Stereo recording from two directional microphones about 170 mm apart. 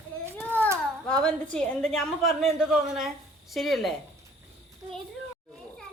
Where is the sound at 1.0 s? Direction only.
5° left (ahead or behind).